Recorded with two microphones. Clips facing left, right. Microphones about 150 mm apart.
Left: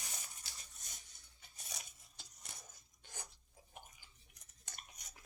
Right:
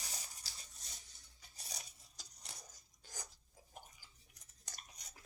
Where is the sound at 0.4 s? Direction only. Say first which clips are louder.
Even; 35° right (ahead or behind).